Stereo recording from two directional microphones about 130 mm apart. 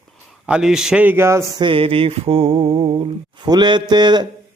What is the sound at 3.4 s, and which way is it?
Speech, 35° right (ahead or behind).